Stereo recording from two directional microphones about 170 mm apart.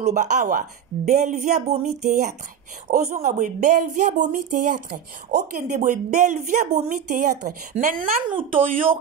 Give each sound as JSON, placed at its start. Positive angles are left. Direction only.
{"t": 0.0, "sound": "speech", "side_deg": -45}
{"t": 2.9, "sound": "speech", "side_deg": -55}